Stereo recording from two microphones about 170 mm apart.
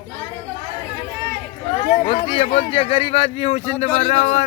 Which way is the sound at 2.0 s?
30° left (ahead or behind).